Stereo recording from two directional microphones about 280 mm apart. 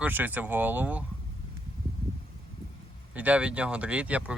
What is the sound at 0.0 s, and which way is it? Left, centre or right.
Speech, centre.